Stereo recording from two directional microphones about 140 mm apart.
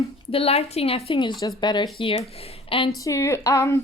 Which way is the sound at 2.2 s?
45° left (ahead or behind).